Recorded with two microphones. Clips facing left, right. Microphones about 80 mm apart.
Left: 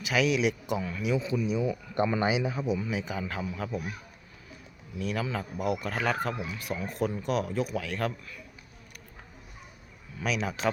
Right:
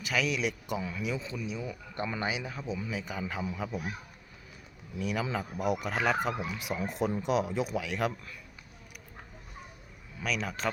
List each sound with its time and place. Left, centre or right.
0.0 s a man's voice: centre
4.9 s speech: centre
10.2 s speech: centre